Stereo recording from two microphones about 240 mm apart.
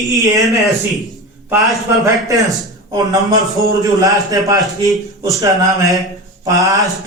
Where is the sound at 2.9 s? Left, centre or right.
Centre.